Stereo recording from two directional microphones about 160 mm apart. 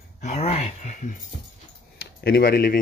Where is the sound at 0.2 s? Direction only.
45° left (ahead or behind).